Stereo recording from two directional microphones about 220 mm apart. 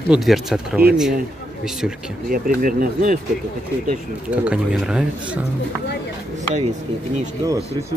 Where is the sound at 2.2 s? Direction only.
40° right (ahead or behind).